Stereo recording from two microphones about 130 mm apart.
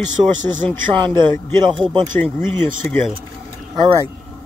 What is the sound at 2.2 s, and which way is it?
Speech, 15° left (ahead or behind).